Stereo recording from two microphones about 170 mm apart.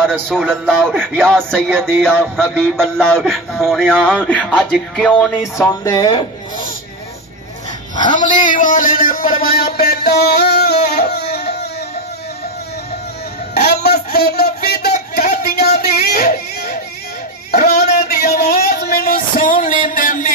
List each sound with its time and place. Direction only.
0.3 s music: 5° left (ahead or behind)
1.7 s music: 10° right (ahead or behind)
2.0 s music: 5° left (ahead or behind)
5.6 s speech: 20° left (ahead or behind)
8.0 s speech: 25° left (ahead or behind)
8.3 s music: 50° left (ahead or behind); by 11.0 s 70° left (ahead or behind)
11.1 s a sound: 70° left (ahead or behind)
13.6 s a sound: 70° left (ahead or behind)
17.5 s speech: 65° left (ahead or behind)
18.0 s music: 70° left (ahead or behind); by 20.3 s 50° left (ahead or behind)